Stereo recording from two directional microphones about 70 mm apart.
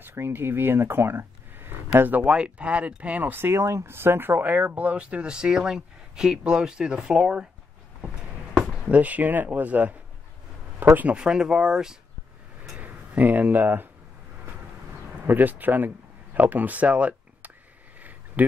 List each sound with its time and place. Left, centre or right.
0.0 s speech: right
2.2 s speech: centre
8.8 s speech: right
11.1 s speech: centre
12.8 s speech: right
15.2 s speech: right